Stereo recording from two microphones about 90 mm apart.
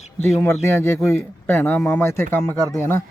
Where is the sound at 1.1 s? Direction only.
25° left (ahead or behind).